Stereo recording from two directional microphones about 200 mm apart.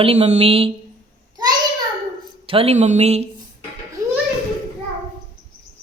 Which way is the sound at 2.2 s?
30° right (ahead or behind).